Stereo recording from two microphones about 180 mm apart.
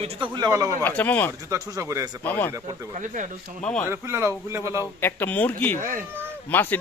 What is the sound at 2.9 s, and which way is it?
Speech, 45° right (ahead or behind).